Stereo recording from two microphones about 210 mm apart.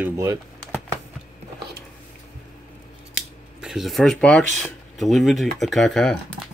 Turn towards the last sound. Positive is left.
turn(degrees=0)  # may be behind; listen again after turning